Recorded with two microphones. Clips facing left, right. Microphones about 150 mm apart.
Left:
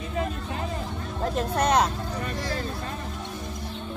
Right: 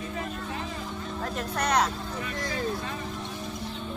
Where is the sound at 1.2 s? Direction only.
25° left (ahead or behind).